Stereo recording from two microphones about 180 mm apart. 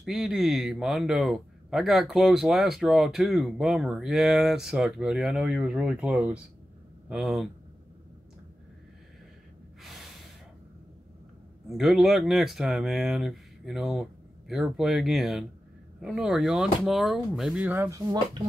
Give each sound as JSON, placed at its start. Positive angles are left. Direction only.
{"t": 0.0, "sound": "speech", "side_deg": 0}
{"t": 9.8, "sound": "gasp", "side_deg": 0}
{"t": 11.7, "sound": "speech", "side_deg": 0}